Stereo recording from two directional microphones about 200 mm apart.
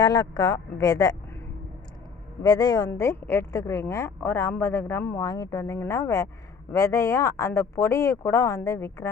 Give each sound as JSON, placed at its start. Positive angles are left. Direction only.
{"t": 0.0, "sound": "speech", "side_deg": 20}
{"t": 2.4, "sound": "a woman's voice", "side_deg": 20}